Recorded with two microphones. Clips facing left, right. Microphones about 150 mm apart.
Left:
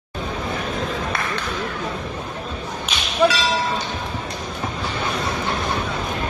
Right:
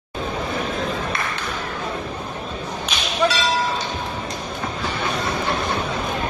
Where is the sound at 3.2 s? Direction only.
10° left (ahead or behind).